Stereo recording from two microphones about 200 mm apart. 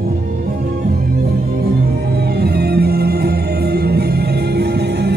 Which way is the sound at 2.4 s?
55° right (ahead or behind).